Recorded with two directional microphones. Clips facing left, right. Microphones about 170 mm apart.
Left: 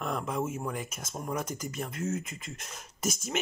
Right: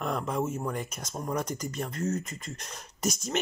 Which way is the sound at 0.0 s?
Centre (ahead or behind).